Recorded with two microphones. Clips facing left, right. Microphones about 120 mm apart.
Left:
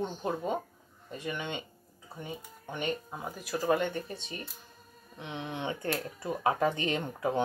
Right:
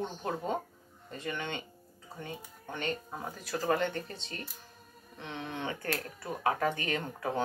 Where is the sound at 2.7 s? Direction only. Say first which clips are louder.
Left 2 dB; 15° left (ahead or behind).